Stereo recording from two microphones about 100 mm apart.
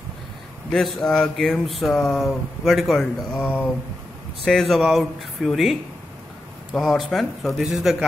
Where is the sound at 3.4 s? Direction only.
20° left (ahead or behind).